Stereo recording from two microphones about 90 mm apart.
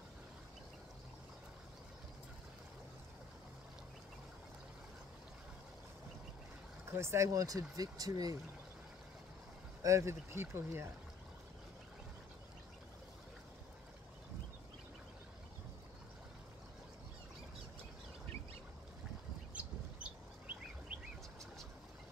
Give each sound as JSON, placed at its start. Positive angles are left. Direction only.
{"t": 6.9, "sound": "speech", "side_deg": -30}
{"t": 9.8, "sound": "speech", "side_deg": -30}
{"t": 19.5, "sound": "chirp", "side_deg": -15}